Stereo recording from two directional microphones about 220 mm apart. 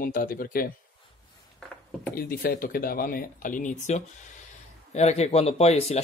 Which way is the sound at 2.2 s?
40° left (ahead or behind).